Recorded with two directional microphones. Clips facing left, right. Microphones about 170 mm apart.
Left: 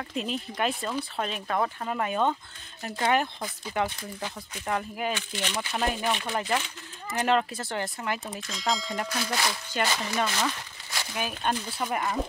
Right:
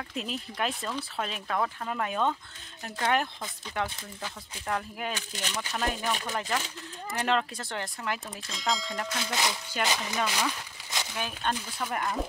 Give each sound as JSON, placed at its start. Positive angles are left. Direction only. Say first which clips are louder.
{"t": 0.1, "sound": "speech", "louder": "left 5 dB", "side_deg": 0}
{"t": 5.1, "sound": "speech", "louder": "left 4 dB", "side_deg": -40}
{"t": 5.7, "sound": "speech", "louder": "left 2 dB", "side_deg": 10}
{"t": 9.2, "sound": "speech", "louder": "left 1 dB", "side_deg": -20}
{"t": 9.9, "sound": "speech", "louder": "left 3 dB", "side_deg": 5}
{"t": 10.2, "sound": "a sound", "louder": "left 1 dB", "side_deg": -10}
{"t": 11.1, "sound": "speech", "louder": "left 3 dB", "side_deg": 10}